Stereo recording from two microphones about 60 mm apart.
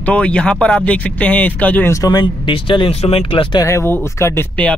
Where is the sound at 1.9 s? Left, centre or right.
Left.